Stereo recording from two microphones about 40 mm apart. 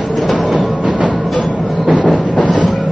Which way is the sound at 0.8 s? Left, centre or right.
Right.